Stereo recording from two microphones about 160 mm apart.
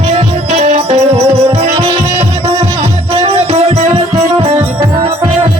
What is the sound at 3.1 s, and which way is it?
Music, 35° right (ahead or behind).